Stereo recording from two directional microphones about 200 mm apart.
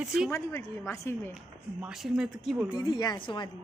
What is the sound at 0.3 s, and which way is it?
Speech, 15° left (ahead or behind).